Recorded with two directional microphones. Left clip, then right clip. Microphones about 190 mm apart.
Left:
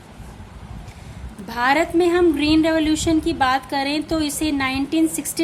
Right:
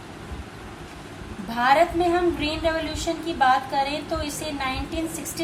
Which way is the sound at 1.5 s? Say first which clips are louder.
Left 1 dB; 60° left (ahead or behind).